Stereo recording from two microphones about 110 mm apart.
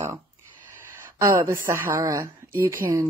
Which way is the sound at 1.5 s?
20° right (ahead or behind).